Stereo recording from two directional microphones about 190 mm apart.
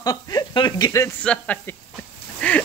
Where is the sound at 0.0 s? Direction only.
20° left (ahead or behind).